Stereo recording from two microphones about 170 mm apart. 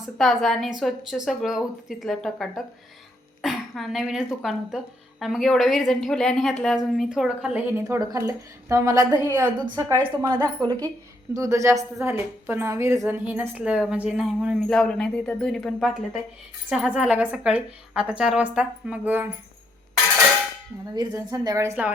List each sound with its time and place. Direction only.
0.0 s a woman's voice: centre (ahead or behind)
3.4 s throat clearing: centre (ahead or behind)
4.4 s a woman's voice: centre (ahead or behind)
7.9 s a woman's voice: 20° right (ahead or behind)
11.3 s a woman's voice: 20° right (ahead or behind)
20.9 s a woman's voice: 25° right (ahead or behind)